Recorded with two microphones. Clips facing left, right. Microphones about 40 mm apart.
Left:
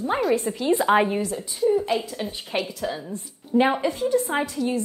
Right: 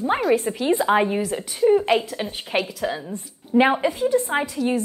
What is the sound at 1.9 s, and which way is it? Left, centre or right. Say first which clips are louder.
Speech: right 4 dB; right.